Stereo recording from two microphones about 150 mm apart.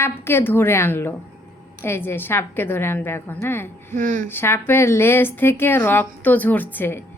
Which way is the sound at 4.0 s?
60° right (ahead or behind).